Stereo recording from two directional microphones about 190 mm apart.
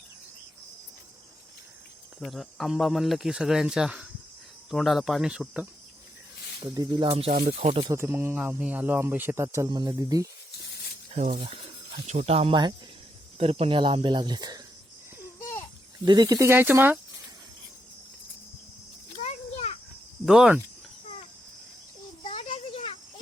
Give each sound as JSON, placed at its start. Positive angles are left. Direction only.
{"t": 2.2, "sound": "speech", "side_deg": 0}
{"t": 6.7, "sound": "speech", "side_deg": -20}
{"t": 7.3, "sound": "speech", "side_deg": -45}
{"t": 7.6, "sound": "speech", "side_deg": -30}
{"t": 7.9, "sound": "speech", "side_deg": -15}
{"t": 11.1, "sound": "speech", "side_deg": -40}
{"t": 16.0, "sound": "speech", "side_deg": -20}
{"t": 19.2, "sound": "a sound", "side_deg": 35}
{"t": 20.2, "sound": "speech", "side_deg": 0}
{"t": 22.2, "sound": "a sound", "side_deg": 30}